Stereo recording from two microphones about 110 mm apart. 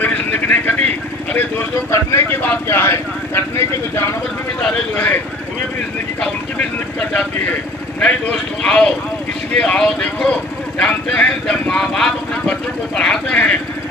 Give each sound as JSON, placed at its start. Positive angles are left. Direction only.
{"t": 0.0, "sound": "vehicle", "side_deg": 15}
{"t": 1.9, "sound": "speech", "side_deg": 25}
{"t": 4.6, "sound": "speech", "side_deg": 10}
{"t": 7.1, "sound": "a man's voice", "side_deg": 15}